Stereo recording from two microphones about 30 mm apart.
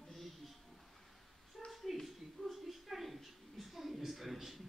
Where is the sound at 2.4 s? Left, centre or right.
Left.